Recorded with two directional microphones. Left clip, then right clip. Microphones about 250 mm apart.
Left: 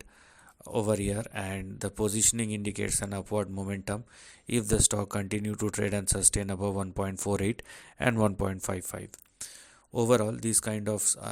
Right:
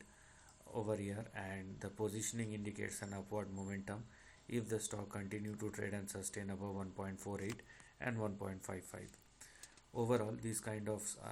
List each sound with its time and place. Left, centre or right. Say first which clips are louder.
0.6 s speech: left 13 dB; left